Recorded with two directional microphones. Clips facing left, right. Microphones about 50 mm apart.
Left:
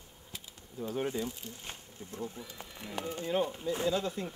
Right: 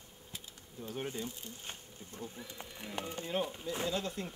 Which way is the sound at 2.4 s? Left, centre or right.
Centre.